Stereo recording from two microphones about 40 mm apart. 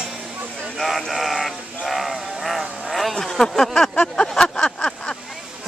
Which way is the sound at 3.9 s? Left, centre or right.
Left.